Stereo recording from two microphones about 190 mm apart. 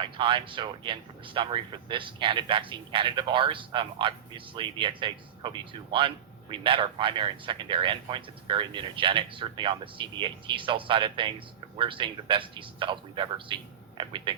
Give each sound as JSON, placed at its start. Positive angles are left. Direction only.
{"t": 0.0, "sound": "speech", "side_deg": -25}